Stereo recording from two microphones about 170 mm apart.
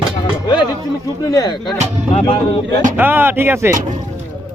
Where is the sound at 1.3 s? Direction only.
20° left (ahead or behind).